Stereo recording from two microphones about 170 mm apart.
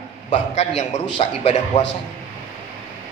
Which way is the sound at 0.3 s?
40° left (ahead or behind).